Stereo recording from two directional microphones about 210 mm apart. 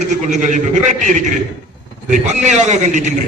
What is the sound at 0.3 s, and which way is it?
A man's voice, 35° right (ahead or behind).